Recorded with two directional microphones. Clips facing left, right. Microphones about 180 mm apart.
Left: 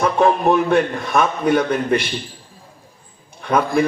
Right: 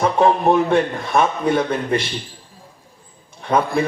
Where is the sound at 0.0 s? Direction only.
25° right (ahead or behind).